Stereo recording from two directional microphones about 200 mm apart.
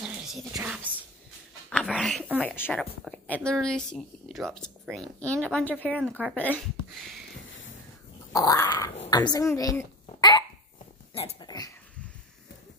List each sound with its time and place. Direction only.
0.0 s a sound: 5° right (ahead or behind)
1.7 s dog: 5° left (ahead or behind)
2.4 s speech: 10° left (ahead or behind)
8.3 s dog: 15° left (ahead or behind)
9.1 s a child's voice: 20° left (ahead or behind)
11.1 s dog: 25° left (ahead or behind)